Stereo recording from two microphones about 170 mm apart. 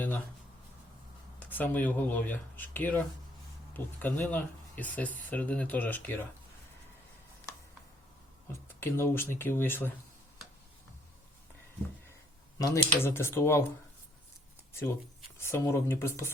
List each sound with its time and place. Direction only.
1.4 s speech: 10° left (ahead or behind)
8.6 s speech: 15° left (ahead or behind)
12.5 s speech: 20° left (ahead or behind)
14.7 s a sound: 15° left (ahead or behind)
15.4 s speech: 15° left (ahead or behind)